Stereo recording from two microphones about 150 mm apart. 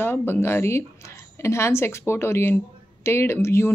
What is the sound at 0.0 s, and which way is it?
Speech, 15° left (ahead or behind).